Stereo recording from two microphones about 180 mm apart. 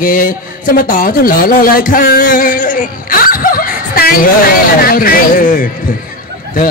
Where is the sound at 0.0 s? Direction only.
50° left (ahead or behind).